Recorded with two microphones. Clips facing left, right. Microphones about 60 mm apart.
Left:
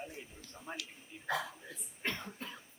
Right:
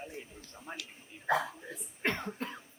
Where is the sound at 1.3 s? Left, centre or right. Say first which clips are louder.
Right 6 dB; right.